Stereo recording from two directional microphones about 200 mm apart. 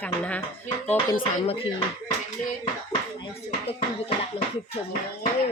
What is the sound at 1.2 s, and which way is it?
Speech, 25° left (ahead or behind).